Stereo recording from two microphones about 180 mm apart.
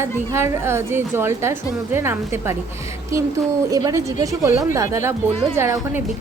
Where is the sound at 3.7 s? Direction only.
20° right (ahead or behind).